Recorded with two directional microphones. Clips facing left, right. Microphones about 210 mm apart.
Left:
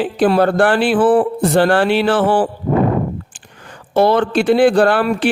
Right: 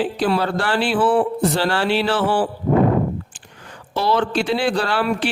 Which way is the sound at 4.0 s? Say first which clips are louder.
Left 6 dB; 55° left (ahead or behind).